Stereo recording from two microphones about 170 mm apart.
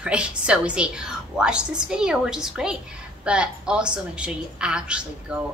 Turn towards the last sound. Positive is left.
turn(degrees=-5)  # may be behind; listen again after turning